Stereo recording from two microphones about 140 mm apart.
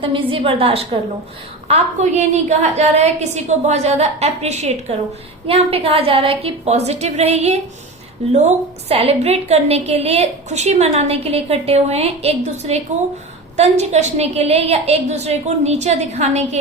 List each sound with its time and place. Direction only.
0.0 s a woman's voice: 40° right (ahead or behind)